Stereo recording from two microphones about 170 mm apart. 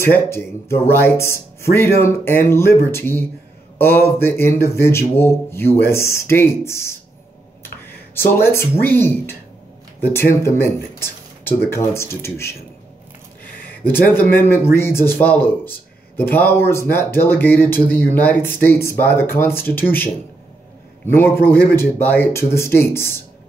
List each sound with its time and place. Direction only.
0.0 s speech: 15° left (ahead or behind)
10.4 s speech: 15° left (ahead or behind)
13.9 s speech: 10° left (ahead or behind)
21.1 s speech: 15° left (ahead or behind)